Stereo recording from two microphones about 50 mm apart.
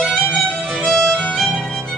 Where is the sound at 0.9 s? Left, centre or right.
Centre.